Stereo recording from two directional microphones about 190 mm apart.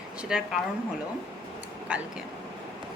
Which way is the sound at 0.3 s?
5° right (ahead or behind).